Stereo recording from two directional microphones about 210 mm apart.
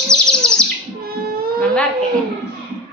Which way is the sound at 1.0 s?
45° right (ahead or behind).